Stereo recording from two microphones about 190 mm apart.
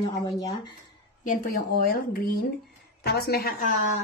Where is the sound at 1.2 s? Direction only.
45° left (ahead or behind).